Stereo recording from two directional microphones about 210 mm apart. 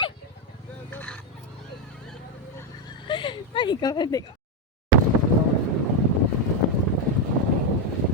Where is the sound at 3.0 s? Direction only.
25° left (ahead or behind).